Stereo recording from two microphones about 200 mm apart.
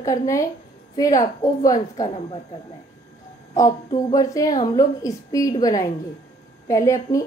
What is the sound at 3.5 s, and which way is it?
A woman's voice, 20° left (ahead or behind).